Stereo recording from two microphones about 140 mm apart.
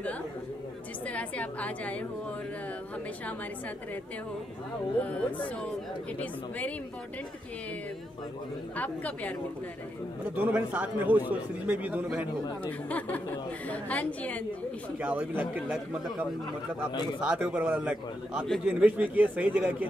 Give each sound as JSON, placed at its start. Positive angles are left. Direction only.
{"t": 1.0, "sound": "a woman's voice", "side_deg": 10}
{"t": 8.7, "sound": "a woman's voice", "side_deg": 10}
{"t": 10.3, "sound": "a man's voice", "side_deg": -10}
{"t": 12.6, "sound": "a woman's voice", "side_deg": 10}
{"t": 15.0, "sound": "a man's voice", "side_deg": -10}